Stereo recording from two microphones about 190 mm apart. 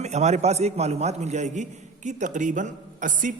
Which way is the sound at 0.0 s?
35° right (ahead or behind).